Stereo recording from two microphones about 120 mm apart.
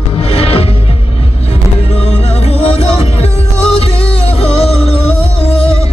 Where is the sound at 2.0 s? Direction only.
60° left (ahead or behind).